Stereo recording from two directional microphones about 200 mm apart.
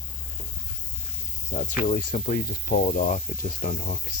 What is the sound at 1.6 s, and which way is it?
Speech, 40° left (ahead or behind).